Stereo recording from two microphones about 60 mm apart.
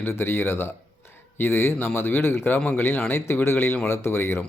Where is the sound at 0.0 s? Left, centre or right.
Left.